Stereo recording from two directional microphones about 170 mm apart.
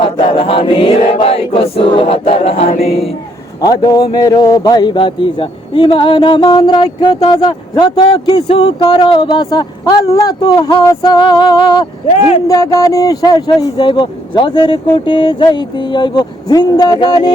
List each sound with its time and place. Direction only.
0.3 s chant: 30° left (ahead or behind)
3.6 s a man's voice: 25° left (ahead or behind)